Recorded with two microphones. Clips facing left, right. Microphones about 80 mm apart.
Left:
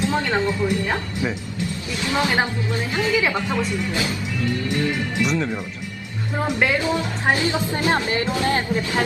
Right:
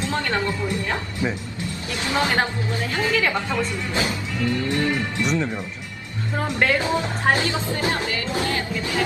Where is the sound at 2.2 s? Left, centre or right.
Centre.